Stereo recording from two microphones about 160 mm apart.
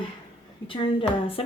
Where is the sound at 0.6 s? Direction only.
35° left (ahead or behind).